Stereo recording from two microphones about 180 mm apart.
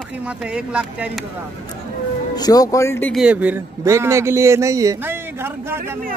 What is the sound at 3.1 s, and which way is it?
A man's voice, 5° right (ahead or behind).